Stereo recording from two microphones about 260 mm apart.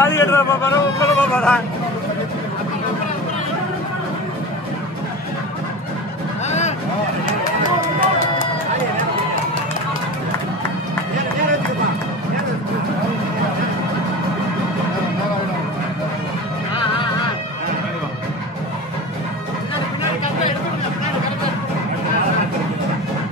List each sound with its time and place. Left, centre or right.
0.0 s a man's voice: centre